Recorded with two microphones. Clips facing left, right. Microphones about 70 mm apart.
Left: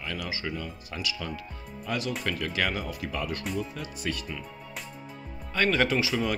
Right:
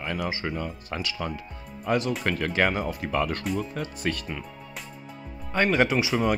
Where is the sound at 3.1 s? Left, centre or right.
Right.